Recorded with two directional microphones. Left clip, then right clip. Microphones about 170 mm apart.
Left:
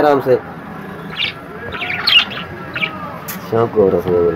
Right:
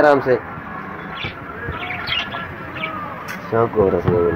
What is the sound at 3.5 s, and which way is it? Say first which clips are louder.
Speech: left 3 dB; 15° left (ahead or behind).